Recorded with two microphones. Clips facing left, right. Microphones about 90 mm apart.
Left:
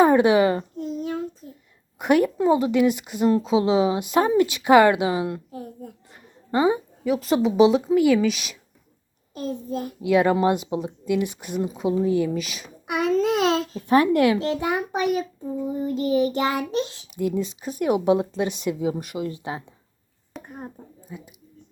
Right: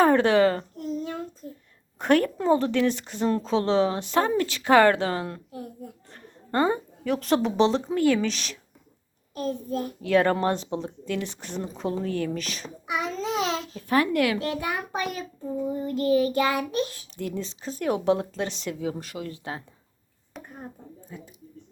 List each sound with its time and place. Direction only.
0.0 s a sound: 15° left (ahead or behind)
2.0 s a child's voice: 10° left (ahead or behind)
6.5 s a child's voice: 10° left (ahead or behind)
9.5 s a child's voice: 25° left (ahead or behind)
12.9 s babbling: 55° left (ahead or behind)
13.7 s a child's voice: 20° left (ahead or behind)
20.4 s a sound: centre (ahead or behind)
21.1 s a child's voice: 10° left (ahead or behind)